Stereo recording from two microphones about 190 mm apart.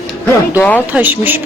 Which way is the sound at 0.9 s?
10° right (ahead or behind).